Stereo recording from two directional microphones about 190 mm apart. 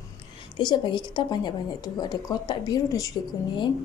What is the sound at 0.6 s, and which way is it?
Speech, 25° left (ahead or behind).